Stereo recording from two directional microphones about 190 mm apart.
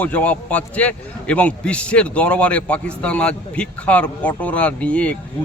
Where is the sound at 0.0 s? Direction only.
10° left (ahead or behind).